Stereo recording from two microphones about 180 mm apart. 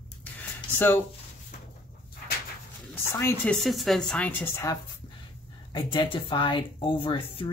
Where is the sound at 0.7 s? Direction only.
10° left (ahead or behind).